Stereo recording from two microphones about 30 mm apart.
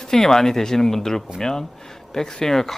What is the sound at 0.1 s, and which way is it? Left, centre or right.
Speech, centre.